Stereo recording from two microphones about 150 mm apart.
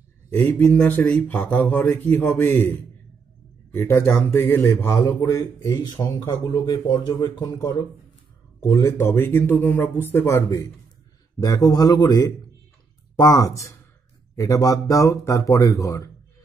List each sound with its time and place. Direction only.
0.3 s speech: 10° left (ahead or behind)